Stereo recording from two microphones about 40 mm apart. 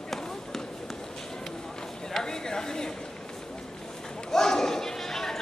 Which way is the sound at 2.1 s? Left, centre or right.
Centre.